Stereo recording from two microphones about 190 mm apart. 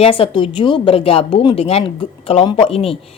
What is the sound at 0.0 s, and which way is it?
A woman's voice, 30° left (ahead or behind).